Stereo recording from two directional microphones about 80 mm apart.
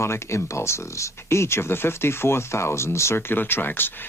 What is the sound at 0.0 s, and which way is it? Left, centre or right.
Speech, left.